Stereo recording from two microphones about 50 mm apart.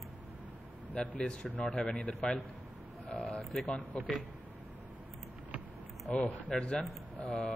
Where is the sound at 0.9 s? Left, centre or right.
Left.